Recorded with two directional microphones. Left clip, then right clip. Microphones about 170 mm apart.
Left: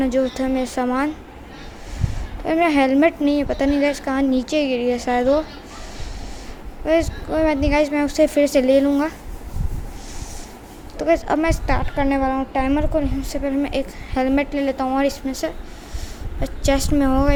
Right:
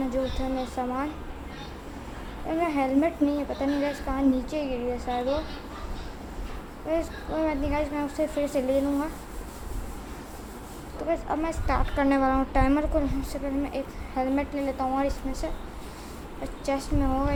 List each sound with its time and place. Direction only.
0.0 s a woman's voice: 40° left (ahead or behind)
2.5 s a woman's voice: 40° left (ahead or behind)
6.8 s a woman's voice: 35° left (ahead or behind)
10.9 s a woman's voice: 35° left (ahead or behind); by 13.1 s 15° left (ahead or behind)
13.3 s a woman's voice: 35° left (ahead or behind)